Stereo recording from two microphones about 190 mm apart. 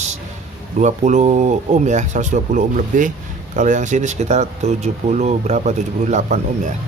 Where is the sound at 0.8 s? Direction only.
40° right (ahead or behind).